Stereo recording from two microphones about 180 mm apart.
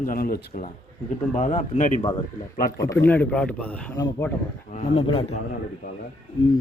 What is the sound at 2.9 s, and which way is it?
Speech, 10° left (ahead or behind).